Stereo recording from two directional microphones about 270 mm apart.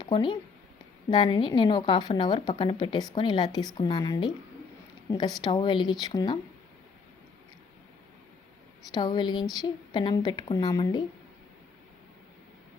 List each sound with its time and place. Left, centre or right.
0.0 s a woman's voice: centre
5.4 s a woman's voice: centre
8.9 s a woman's voice: centre